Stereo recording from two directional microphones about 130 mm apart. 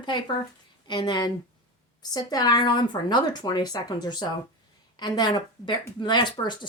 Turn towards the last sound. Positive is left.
turn(degrees=35)  # may be behind; listen again after turning